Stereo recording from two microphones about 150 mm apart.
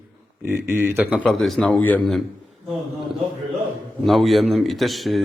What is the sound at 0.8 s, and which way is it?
Speech, 15° right (ahead or behind).